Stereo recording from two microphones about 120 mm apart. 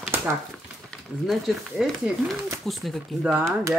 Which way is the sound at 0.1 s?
20° right (ahead or behind).